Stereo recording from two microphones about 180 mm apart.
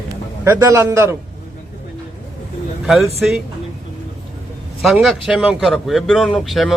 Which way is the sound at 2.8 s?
Centre (ahead or behind).